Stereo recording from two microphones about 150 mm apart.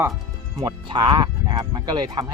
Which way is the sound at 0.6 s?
30° right (ahead or behind).